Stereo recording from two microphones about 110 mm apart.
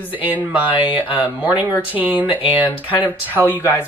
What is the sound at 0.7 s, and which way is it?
Speech, 15° right (ahead or behind).